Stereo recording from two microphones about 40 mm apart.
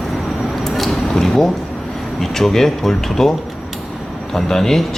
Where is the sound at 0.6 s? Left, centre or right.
Centre.